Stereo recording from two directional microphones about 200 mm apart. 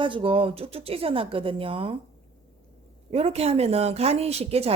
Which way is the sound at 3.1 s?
30° right (ahead or behind).